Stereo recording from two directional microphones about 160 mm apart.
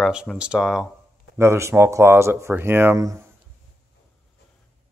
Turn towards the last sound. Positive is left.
turn(degrees=-20)  # may be behind; listen again after turning